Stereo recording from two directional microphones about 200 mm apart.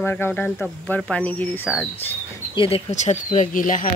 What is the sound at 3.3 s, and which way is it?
Speech, 40° left (ahead or behind).